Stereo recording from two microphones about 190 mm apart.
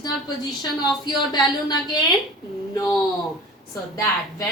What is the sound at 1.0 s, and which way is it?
A woman's voice, 20° left (ahead or behind).